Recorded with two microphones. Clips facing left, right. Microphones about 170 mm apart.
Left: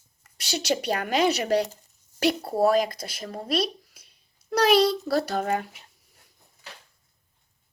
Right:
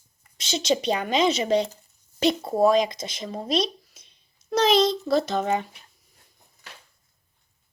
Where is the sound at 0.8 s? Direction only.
10° left (ahead or behind).